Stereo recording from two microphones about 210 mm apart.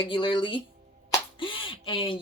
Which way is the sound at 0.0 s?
25° left (ahead or behind).